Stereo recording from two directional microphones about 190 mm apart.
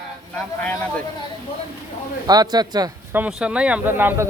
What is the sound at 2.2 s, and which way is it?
Speech, 20° right (ahead or behind).